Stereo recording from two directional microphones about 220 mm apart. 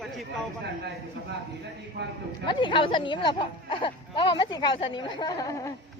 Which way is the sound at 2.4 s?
20° left (ahead or behind).